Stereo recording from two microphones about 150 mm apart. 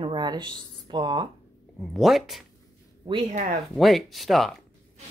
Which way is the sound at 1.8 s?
Centre (ahead or behind).